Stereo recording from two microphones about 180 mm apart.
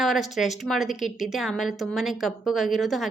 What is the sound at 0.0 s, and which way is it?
A woman's voice, centre (ahead or behind).